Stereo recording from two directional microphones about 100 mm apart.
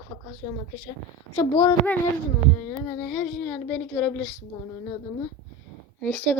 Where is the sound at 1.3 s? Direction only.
40° left (ahead or behind).